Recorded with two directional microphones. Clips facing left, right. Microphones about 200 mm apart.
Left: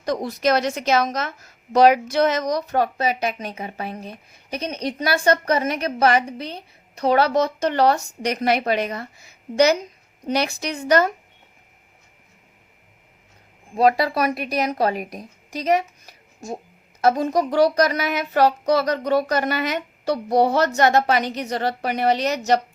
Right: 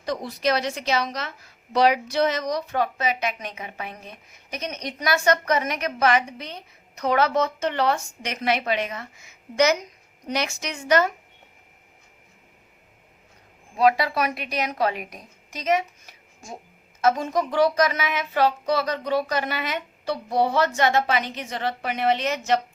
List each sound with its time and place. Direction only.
0.0 s a woman's voice: 45° left (ahead or behind)
13.7 s a woman's voice: 40° left (ahead or behind)